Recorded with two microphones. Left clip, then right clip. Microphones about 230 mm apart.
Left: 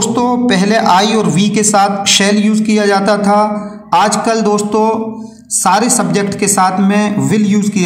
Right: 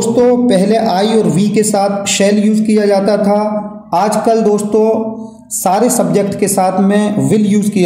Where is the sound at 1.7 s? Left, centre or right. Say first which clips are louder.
Left 6 dB; left.